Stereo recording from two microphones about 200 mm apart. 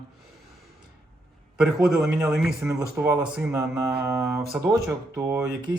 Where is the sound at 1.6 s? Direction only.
Centre (ahead or behind).